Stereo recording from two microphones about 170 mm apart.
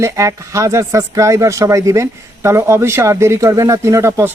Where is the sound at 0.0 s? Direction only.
20° right (ahead or behind).